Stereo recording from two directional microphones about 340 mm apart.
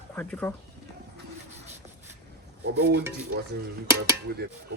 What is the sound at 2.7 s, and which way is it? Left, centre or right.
Stir, right.